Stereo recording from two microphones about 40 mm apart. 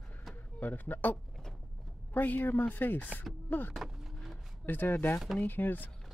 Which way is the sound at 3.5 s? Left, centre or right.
Left.